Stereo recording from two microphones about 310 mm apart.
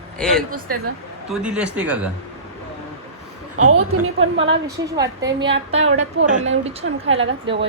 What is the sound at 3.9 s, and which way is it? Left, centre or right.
Speech, right.